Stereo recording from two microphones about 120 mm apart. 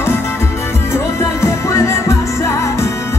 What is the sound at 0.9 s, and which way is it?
Music, 25° left (ahead or behind).